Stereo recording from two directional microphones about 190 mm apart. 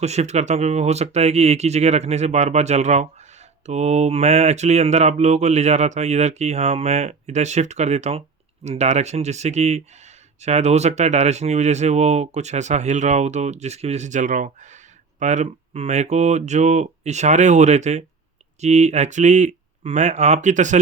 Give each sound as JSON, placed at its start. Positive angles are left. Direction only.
{"t": 0.0, "sound": "speech", "side_deg": -35}